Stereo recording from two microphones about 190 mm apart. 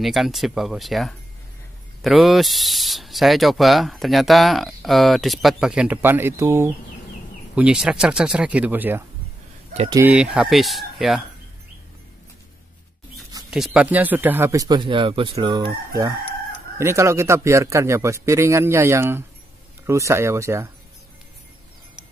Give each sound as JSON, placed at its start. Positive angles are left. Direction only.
{"t": 0.0, "sound": "speech", "side_deg": 0}
{"t": 10.1, "sound": "speech", "side_deg": -5}
{"t": 13.5, "sound": "speech", "side_deg": -5}